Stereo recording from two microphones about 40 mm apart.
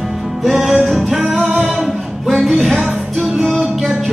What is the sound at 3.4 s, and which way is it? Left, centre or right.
Music, centre.